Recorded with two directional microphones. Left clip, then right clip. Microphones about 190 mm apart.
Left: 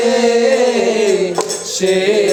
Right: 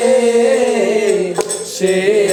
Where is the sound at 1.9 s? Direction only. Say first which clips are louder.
Even; 15° right (ahead or behind).